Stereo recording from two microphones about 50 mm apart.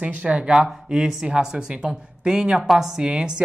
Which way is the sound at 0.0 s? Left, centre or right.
Right.